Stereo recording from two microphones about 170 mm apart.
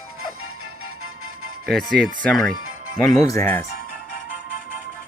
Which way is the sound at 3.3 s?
15° left (ahead or behind).